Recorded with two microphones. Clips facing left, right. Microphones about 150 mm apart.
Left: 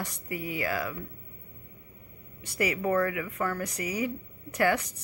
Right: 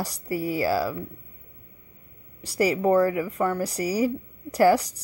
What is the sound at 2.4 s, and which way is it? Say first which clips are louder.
Speech: right 7 dB; 35° right (ahead or behind).